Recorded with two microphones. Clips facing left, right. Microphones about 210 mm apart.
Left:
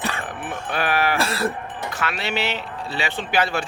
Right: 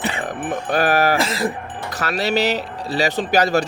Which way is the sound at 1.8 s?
40° right (ahead or behind).